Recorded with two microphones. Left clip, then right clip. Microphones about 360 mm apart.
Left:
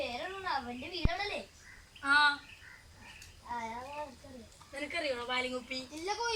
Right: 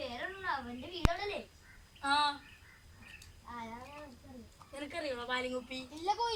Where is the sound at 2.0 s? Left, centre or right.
Right.